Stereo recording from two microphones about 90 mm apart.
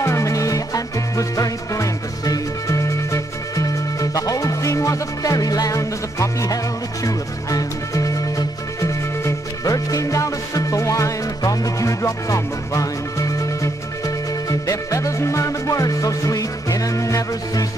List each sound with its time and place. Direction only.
0.0 s music: 35° left (ahead or behind)